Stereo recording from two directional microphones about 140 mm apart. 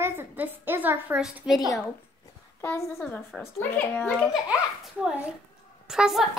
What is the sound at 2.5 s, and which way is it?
A woman's voice, 15° left (ahead or behind).